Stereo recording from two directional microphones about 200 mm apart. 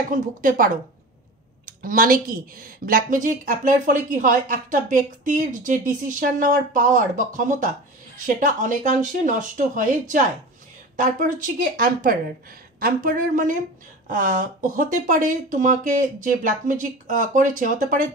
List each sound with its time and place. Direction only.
0.1 s a woman's voice: 45° right (ahead or behind)
1.7 s a woman's voice: 45° right (ahead or behind)